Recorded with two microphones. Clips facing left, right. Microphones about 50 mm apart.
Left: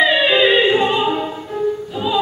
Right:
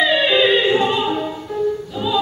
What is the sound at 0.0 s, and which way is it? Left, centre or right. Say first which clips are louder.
Music: left 2 dB; centre.